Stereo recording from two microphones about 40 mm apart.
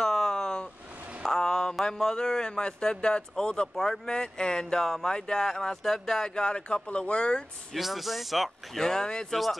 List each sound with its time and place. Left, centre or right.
0.0 s a sound: centre
1.9 s a man's voice: centre
7.7 s speech: centre
8.7 s speech: centre
9.3 s speech: centre